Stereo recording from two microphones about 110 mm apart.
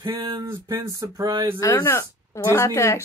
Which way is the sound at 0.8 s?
35° right (ahead or behind).